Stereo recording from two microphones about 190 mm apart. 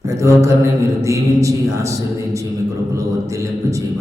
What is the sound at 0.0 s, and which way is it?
A man's voice, 15° right (ahead or behind).